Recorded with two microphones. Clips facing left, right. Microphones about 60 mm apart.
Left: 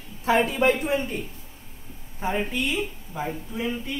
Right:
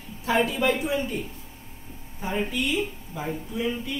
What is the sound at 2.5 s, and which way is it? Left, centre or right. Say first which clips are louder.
Speech: even; left.